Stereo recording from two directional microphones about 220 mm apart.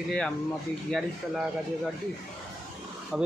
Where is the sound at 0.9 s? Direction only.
Centre (ahead or behind).